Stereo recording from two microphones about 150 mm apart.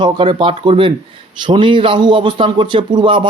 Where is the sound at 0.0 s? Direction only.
35° right (ahead or behind).